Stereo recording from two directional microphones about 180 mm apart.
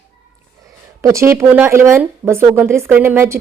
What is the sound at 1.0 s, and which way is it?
Speech, 15° right (ahead or behind).